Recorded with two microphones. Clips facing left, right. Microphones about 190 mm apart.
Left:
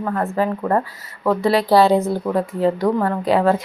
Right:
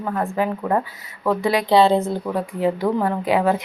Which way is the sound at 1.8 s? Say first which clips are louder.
Left 1 dB; 25° right (ahead or behind).